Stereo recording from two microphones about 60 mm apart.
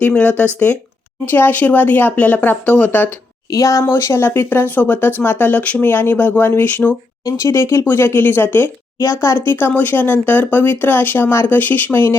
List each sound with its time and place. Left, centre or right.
0.1 s speech: left
1.2 s speech: left
3.5 s speech: left
3.8 s speech: left
7.3 s speech: left